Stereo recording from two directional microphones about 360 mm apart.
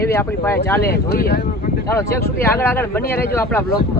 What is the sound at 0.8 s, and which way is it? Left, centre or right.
Speech, left.